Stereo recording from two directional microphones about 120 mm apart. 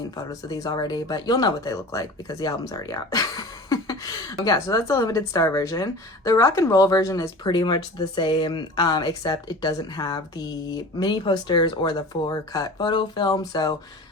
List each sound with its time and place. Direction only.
0.2 s speech: 30° left (ahead or behind)